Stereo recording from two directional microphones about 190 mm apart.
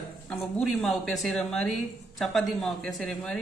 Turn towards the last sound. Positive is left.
turn(degrees=5)  # may be behind; listen again after turning